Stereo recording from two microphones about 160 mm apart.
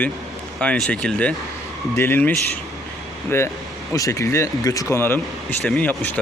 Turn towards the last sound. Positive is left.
turn(degrees=10)  # may be behind; listen again after turning